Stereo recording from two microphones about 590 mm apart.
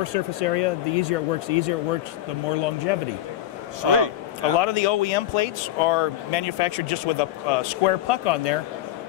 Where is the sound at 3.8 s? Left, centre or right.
Right.